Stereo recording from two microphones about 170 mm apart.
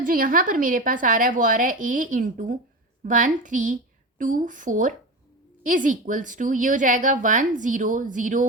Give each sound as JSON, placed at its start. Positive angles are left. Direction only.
{"t": 0.0, "sound": "a woman's voice", "side_deg": -55}